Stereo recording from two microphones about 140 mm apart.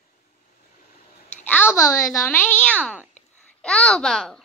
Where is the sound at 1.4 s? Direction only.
15° left (ahead or behind).